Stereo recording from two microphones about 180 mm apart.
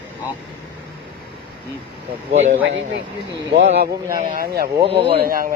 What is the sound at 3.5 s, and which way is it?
Speech, 40° right (ahead or behind).